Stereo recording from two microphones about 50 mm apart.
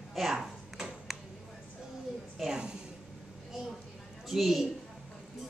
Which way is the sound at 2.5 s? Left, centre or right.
Centre.